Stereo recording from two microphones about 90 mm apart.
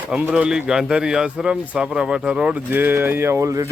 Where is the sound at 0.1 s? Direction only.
15° right (ahead or behind).